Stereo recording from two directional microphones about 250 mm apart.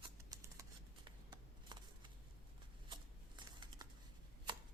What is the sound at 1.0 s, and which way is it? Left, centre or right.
Shuffling cards, centre.